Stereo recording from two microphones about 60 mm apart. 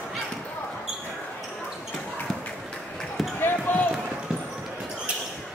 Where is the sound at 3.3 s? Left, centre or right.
Left.